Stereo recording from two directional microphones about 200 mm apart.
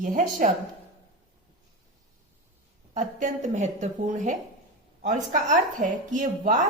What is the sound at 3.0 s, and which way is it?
A woman's voice, 35° right (ahead or behind).